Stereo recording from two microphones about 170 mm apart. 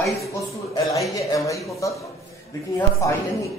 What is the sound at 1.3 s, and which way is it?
Speech, 20° left (ahead or behind).